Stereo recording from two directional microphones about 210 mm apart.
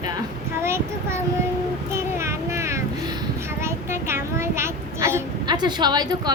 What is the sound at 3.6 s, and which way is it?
A child's voice, 10° right (ahead or behind).